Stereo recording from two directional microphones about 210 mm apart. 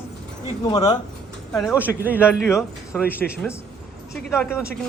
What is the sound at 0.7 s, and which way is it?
Speech, 20° left (ahead or behind).